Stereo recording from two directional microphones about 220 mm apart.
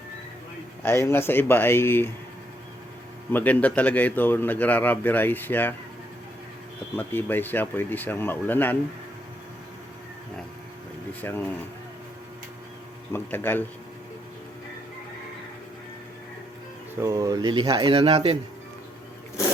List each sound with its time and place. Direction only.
1.0 s a man's voice: 10° left (ahead or behind)
3.3 s a man's voice: 5° left (ahead or behind)
6.9 s a man's voice: 10° left (ahead or behind)
11.2 s a man's voice: 10° left (ahead or behind)
13.1 s a man's voice: 10° left (ahead or behind)
17.0 s speech: 15° right (ahead or behind)